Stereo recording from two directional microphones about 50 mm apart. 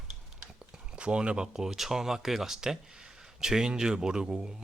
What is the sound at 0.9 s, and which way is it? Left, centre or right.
Speech, right.